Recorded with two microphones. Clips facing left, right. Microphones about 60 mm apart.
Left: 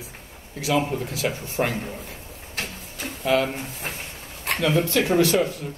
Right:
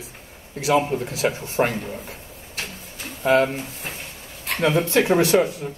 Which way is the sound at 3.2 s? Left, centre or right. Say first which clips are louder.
Right 4 dB; right.